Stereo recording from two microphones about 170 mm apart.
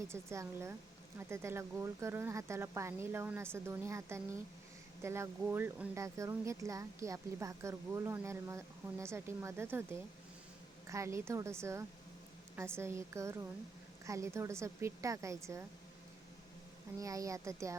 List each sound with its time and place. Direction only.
0.1 s speech: 15° right (ahead or behind)
17.0 s speech: 20° right (ahead or behind)